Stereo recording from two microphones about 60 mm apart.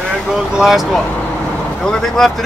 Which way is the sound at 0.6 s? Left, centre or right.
Centre.